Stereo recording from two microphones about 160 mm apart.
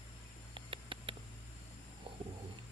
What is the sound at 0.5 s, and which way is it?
Mouse, 35° right (ahead or behind).